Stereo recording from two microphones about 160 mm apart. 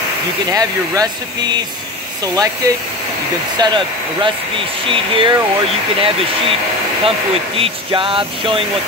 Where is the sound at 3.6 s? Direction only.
30° right (ahead or behind).